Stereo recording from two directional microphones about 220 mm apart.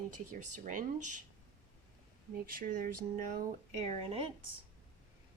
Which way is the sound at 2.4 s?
40° right (ahead or behind).